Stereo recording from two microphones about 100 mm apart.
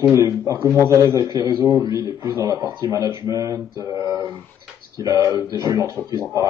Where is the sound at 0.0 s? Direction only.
30° right (ahead or behind).